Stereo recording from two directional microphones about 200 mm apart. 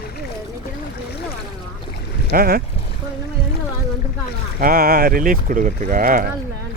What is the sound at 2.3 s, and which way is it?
Speech, 50° right (ahead or behind).